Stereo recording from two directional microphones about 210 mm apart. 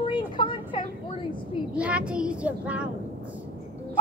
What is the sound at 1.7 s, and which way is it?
Speech, 5° right (ahead or behind).